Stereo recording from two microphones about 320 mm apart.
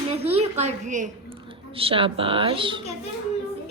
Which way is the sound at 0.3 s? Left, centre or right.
Right.